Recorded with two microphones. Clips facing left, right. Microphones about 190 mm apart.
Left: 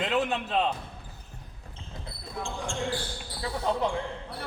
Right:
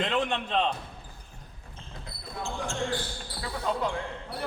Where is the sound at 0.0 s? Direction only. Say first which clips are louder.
Left 1 dB; 5° left (ahead or behind).